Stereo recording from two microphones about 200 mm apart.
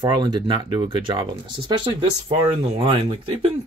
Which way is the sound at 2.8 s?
30° right (ahead or behind).